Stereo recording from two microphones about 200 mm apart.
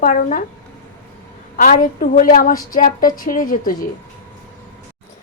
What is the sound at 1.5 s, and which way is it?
A woman's voice, 45° left (ahead or behind).